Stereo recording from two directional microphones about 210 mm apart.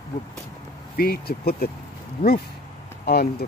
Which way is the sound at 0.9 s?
45° left (ahead or behind).